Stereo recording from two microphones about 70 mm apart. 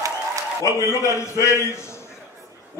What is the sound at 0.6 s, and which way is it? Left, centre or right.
A man's voice, left.